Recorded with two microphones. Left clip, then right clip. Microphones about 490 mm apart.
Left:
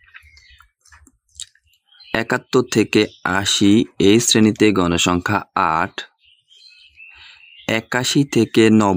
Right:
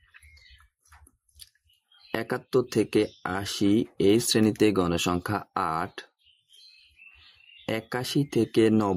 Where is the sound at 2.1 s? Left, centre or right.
Right.